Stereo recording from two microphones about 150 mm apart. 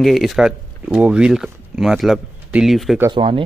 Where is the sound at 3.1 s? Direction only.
35° right (ahead or behind).